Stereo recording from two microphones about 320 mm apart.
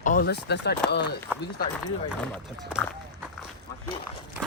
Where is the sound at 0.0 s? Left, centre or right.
Left.